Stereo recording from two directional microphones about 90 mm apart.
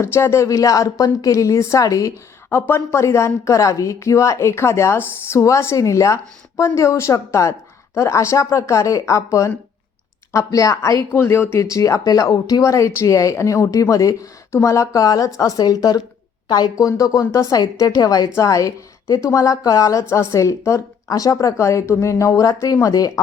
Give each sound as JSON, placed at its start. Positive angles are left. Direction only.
{"t": 0.0, "sound": "speech", "side_deg": 30}
{"t": 11.1, "sound": "speech", "side_deg": 25}